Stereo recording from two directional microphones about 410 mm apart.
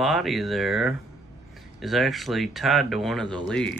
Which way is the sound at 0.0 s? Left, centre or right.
Centre.